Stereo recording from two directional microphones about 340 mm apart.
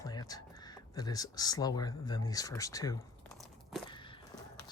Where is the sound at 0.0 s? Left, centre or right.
Centre.